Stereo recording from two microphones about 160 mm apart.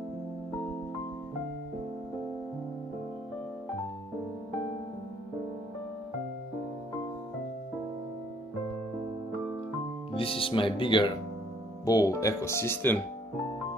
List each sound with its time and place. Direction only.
10.1 s speech: 35° left (ahead or behind); by 13.0 s 15° left (ahead or behind)